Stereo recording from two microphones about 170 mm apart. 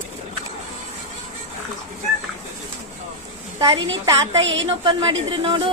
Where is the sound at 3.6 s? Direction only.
25° right (ahead or behind).